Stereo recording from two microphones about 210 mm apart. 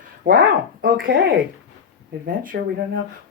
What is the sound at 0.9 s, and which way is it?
Speech, 65° right (ahead or behind).